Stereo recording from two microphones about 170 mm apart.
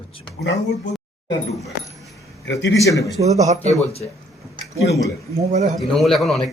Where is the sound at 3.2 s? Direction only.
40° right (ahead or behind).